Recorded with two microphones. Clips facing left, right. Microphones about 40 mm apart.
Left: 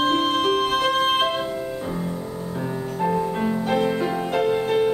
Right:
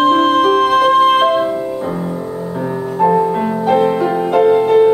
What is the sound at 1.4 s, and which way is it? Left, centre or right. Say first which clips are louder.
Music: right 9 dB; right.